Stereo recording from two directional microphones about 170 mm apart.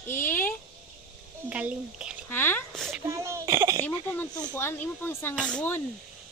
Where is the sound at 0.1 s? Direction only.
10° left (ahead or behind).